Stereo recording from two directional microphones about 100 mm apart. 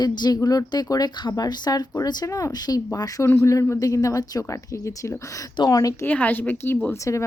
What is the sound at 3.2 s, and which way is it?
A woman's voice, 25° left (ahead or behind).